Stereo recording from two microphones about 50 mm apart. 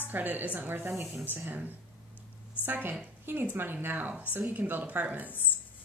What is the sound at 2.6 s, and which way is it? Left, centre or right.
A woman's voice, right.